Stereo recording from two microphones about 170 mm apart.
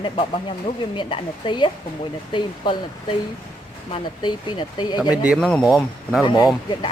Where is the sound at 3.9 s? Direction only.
25° left (ahead or behind).